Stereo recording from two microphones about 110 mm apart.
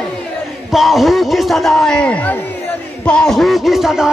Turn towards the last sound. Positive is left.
turn(degrees=-5)  # may be behind; listen again after turning